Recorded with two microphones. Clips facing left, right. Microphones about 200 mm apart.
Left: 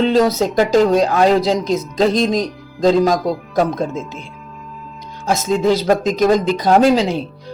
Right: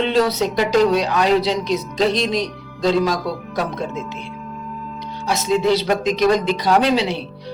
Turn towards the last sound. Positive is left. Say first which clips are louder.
# left 4 dB
turn(degrees=45)  # may be behind; listen again after turning